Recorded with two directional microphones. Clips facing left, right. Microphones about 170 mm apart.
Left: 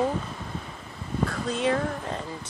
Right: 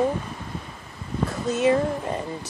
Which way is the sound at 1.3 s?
5° right (ahead or behind).